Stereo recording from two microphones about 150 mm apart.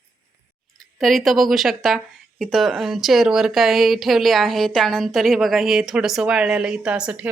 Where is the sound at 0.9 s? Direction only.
Centre (ahead or behind).